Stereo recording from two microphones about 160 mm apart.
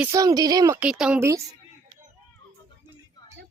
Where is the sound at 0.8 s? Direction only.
5° right (ahead or behind).